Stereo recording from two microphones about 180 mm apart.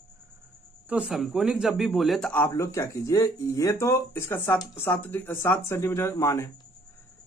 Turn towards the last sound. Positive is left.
turn(degrees=15)  # may be behind; listen again after turning